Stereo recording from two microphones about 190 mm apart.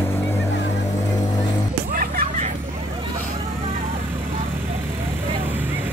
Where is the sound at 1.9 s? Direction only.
50° right (ahead or behind).